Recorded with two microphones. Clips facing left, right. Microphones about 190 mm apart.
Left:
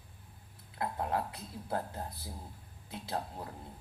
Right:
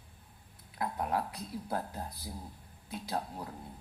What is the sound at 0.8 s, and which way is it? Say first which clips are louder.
A man's voice: right 1 dB; 25° left (ahead or behind).